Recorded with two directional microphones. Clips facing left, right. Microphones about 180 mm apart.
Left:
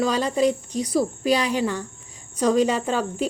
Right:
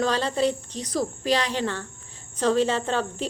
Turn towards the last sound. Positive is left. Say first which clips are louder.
# left 2 dB
turn(degrees=10)  # may be behind; listen again after turning